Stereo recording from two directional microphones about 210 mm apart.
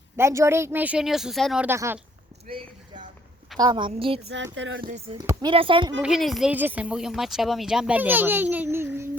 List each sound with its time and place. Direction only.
0.2 s speech: 15° right (ahead or behind)
2.5 s a sound: 25° right (ahead or behind)
3.6 s speech: 20° right (ahead or behind)
4.5 s speech: 60° right (ahead or behind)
5.1 s speech: 15° right (ahead or behind)
6.0 s speech: centre (ahead or behind)